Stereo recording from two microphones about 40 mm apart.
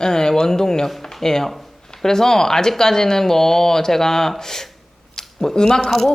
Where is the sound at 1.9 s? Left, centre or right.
Centre.